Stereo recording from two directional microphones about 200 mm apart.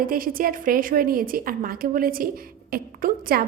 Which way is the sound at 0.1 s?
45° right (ahead or behind).